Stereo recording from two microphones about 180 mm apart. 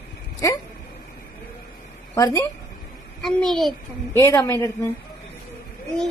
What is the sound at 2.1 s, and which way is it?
Speech, 15° left (ahead or behind).